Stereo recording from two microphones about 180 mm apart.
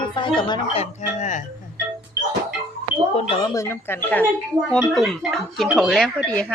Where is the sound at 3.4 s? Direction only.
15° left (ahead or behind).